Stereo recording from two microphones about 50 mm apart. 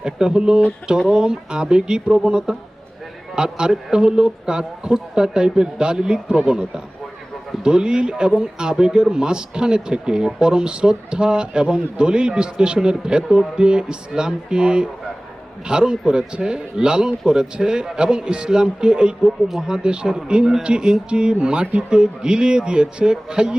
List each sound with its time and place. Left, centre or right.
0.0 s speech: centre